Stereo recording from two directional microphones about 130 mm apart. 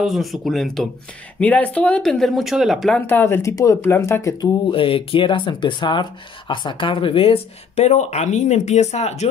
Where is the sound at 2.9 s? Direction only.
15° left (ahead or behind).